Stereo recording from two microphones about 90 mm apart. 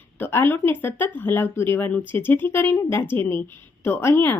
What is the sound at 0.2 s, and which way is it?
A woman's voice, 25° left (ahead or behind).